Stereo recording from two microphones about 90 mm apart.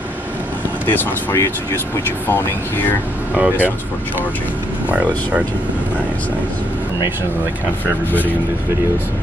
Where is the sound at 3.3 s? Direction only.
20° right (ahead or behind).